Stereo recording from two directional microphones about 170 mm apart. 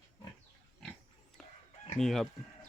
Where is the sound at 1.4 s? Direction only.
Centre (ahead or behind).